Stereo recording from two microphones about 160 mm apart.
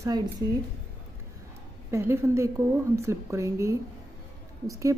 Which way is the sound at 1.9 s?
15° right (ahead or behind).